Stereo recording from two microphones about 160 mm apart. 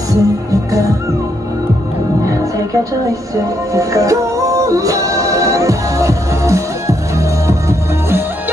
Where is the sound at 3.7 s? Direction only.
20° right (ahead or behind).